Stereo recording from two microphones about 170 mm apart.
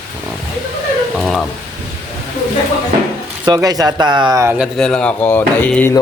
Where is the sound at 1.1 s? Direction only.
Centre (ahead or behind).